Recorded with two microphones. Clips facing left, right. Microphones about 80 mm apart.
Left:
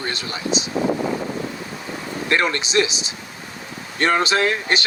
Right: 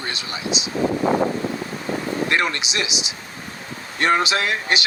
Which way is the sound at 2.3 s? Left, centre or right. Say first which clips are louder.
Left 6 dB; left.